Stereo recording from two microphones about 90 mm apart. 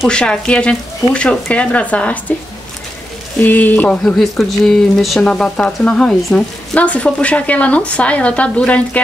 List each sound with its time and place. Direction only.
0.1 s speech: 10° left (ahead or behind)
3.3 s speech: 20° left (ahead or behind)
4.0 s speech: centre (ahead or behind)